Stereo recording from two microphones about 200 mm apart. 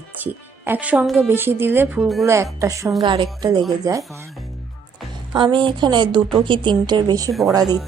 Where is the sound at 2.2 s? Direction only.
15° right (ahead or behind).